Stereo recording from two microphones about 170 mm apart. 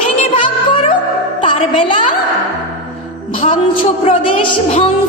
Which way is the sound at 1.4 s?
30° left (ahead or behind).